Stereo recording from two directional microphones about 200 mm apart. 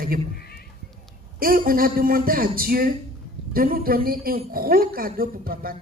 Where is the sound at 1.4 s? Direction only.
45° right (ahead or behind).